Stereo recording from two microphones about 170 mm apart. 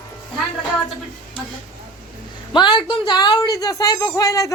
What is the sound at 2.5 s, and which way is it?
Speech, 25° left (ahead or behind).